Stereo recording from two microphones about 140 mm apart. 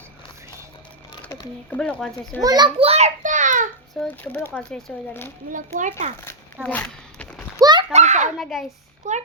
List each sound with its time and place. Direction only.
1.2 s speech: 10° left (ahead or behind)
2.4 s a child's voice: 25° right (ahead or behind)
2.7 s child singing: 45° right (ahead or behind); by 3.7 s 65° right (ahead or behind)
4.0 s speech: 10° left (ahead or behind)
4.9 s a child's voice: 5° left (ahead or behind)
5.5 s a child's voice: 65° right (ahead or behind)
6.2 s a sound: 10° left (ahead or behind)
7.6 s a sound: 30° right (ahead or behind)
7.9 s a sound: 55° right (ahead or behind)
8.4 s a child's voice: centre (ahead or behind)
9.0 s a child's voice: 55° right (ahead or behind)